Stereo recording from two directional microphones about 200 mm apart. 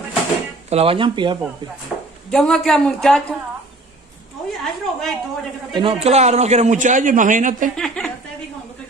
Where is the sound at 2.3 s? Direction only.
5° left (ahead or behind).